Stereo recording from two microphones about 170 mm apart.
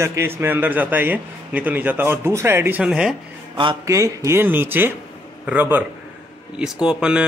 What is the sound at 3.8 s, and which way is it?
Speech, 20° right (ahead or behind).